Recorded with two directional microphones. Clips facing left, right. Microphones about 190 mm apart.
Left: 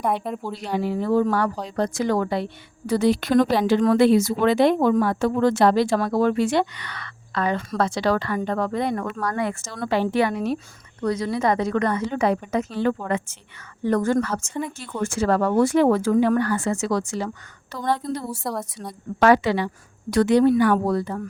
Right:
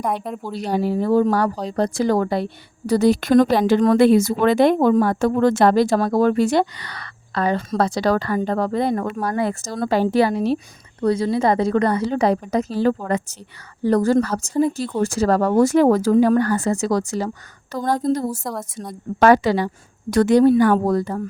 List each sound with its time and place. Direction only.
0.0 s speech: centre (ahead or behind)
0.5 s a woman's voice: 40° right (ahead or behind)
18.4 s speech: centre (ahead or behind)
18.9 s a woman's voice: 45° right (ahead or behind)